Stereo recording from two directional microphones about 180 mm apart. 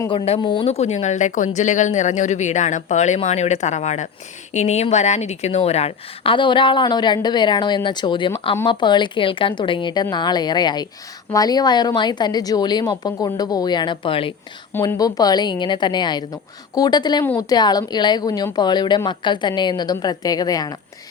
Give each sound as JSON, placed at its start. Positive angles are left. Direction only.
{"t": 0.1, "sound": "a woman's voice", "side_deg": 25}
{"t": 14.7, "sound": "a woman's voice", "side_deg": 15}